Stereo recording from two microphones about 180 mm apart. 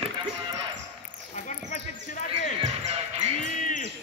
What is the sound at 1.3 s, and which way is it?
Basketball bounce, 40° left (ahead or behind).